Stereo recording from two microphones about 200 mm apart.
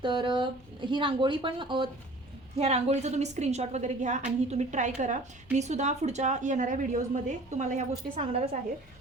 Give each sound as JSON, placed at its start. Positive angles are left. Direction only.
{"t": 0.0, "sound": "a woman's voice", "side_deg": -25}